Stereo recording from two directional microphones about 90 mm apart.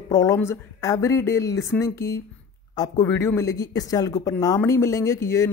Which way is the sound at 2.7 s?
45° left (ahead or behind).